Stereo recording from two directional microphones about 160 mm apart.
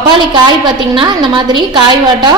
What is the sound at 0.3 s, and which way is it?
A woman's voice, 30° right (ahead or behind).